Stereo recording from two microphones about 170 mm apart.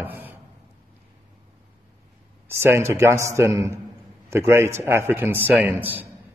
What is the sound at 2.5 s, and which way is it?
A man's voice, 15° right (ahead or behind).